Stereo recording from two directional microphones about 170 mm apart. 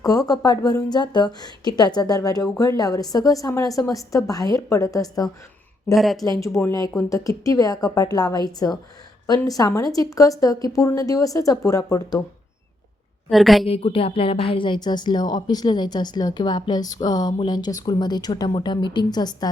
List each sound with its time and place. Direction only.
0.0 s speech: 20° left (ahead or behind)
5.9 s speech: centre (ahead or behind)
6.2 s speech: 20° left (ahead or behind)
13.3 s speech: centre (ahead or behind)
13.7 s a sound: 35° left (ahead or behind)
14.5 s speech: 30° left (ahead or behind)